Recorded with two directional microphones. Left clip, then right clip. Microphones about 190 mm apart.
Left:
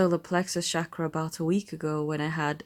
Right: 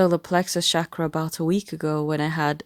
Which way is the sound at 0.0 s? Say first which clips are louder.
Right 5 dB; 45° right (ahead or behind).